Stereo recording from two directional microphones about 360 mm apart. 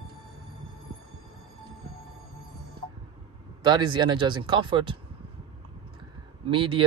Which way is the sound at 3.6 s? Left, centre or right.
Centre.